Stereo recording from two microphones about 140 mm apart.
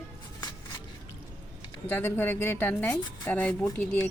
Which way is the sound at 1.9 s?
15° left (ahead or behind).